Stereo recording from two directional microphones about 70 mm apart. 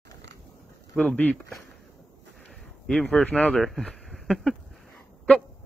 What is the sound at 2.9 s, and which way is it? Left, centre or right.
Speech, centre.